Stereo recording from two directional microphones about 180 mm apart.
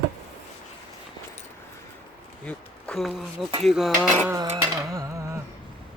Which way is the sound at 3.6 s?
Centre (ahead or behind).